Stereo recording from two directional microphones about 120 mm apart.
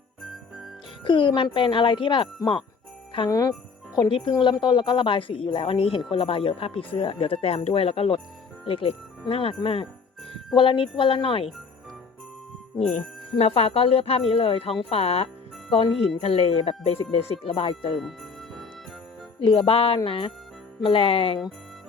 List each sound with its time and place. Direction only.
1.0 s speech: 45° left (ahead or behind)
3.2 s a woman's voice: 30° left (ahead or behind); by 11.5 s 50° left (ahead or behind)
13.3 s speech: 55° left (ahead or behind)
17.9 s jingle bell: centre (ahead or behind)
19.5 s speech: 45° left (ahead or behind)